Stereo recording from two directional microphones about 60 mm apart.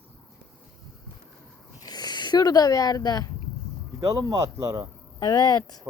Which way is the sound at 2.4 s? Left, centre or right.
Left.